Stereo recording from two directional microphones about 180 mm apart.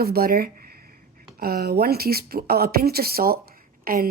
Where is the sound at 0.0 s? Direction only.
55° right (ahead or behind).